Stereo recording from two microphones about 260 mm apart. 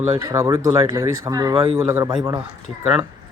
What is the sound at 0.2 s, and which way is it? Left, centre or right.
Speech, centre.